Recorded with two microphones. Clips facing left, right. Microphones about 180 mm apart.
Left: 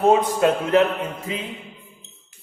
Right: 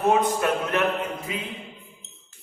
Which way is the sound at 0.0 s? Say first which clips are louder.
Left 4 dB; 25° left (ahead or behind).